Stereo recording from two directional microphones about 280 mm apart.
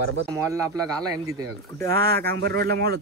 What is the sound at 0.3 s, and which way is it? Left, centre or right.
Speech, centre.